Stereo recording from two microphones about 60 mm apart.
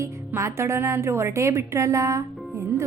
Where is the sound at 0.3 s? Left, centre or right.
Right.